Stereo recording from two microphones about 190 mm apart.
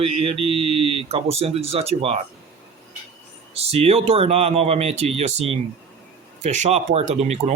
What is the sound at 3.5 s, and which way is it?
Speech, 35° right (ahead or behind).